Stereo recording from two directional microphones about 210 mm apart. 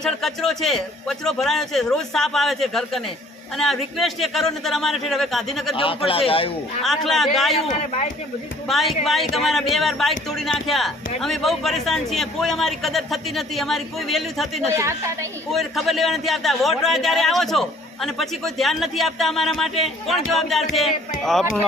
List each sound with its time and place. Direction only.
0.0 s speech: centre (ahead or behind)
5.7 s a man's voice: 25° left (ahead or behind)
6.8 s speech: centre (ahead or behind)
7.7 s a man's voice: 35° left (ahead or behind)
8.6 s speech: centre (ahead or behind)
14.7 s a woman's voice: 15° right (ahead or behind)
15.5 s speech: centre (ahead or behind)